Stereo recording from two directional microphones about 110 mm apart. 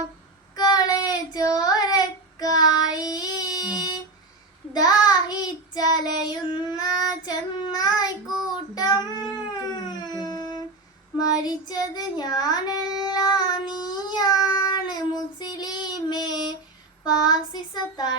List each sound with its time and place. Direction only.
0.5 s child singing: 35° left (ahead or behind)
3.8 s a sound: 40° left (ahead or behind)
4.7 s child singing: 40° left (ahead or behind)
9.5 s howl: 40° left (ahead or behind)
11.3 s child singing: 35° left (ahead or behind)